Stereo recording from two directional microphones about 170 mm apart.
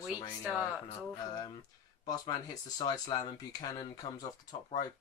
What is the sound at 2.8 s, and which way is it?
Speech, 25° left (ahead or behind).